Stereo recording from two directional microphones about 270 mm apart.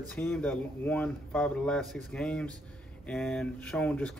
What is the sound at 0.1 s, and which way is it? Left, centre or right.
Speech, centre.